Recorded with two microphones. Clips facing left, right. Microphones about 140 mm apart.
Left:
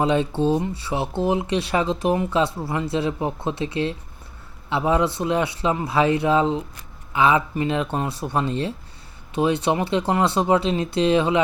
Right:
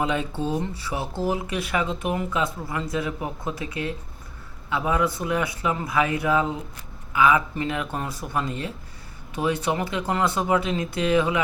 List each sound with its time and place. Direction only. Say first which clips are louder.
0.0 s speech: left 6 dB; 30° left (ahead or behind)